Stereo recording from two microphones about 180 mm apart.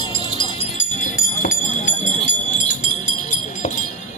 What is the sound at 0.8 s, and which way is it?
Music, 50° left (ahead or behind).